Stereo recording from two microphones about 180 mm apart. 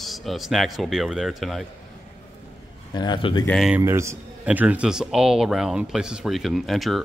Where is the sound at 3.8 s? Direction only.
15° right (ahead or behind).